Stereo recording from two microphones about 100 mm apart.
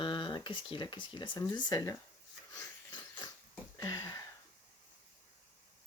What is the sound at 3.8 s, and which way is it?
Sniff, 35° left (ahead or behind).